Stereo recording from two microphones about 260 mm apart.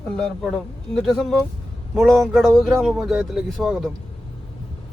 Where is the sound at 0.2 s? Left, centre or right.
Centre.